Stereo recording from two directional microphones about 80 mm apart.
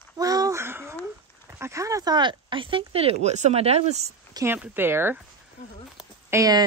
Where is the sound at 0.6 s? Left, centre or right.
Right.